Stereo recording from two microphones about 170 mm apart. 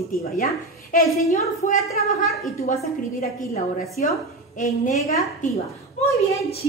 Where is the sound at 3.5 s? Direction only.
60° left (ahead or behind).